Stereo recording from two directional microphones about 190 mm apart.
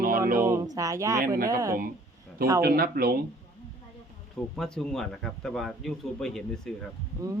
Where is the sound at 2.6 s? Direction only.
50° right (ahead or behind).